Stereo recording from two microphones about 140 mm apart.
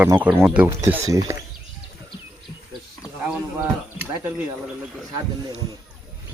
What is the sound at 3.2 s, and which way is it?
Speech, 10° right (ahead or behind).